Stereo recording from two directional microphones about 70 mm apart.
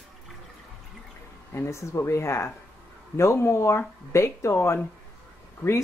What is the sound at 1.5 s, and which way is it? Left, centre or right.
Speech, left.